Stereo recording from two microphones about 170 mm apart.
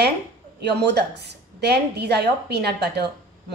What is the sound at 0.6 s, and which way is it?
A woman's voice, 80° right.